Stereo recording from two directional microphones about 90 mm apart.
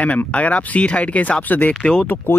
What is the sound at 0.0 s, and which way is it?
Speech, 15° left (ahead or behind).